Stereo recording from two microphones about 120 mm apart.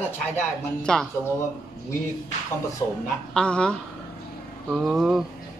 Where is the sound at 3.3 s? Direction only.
10° left (ahead or behind).